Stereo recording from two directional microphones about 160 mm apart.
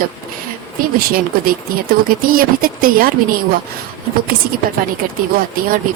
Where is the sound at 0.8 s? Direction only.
65° right (ahead or behind).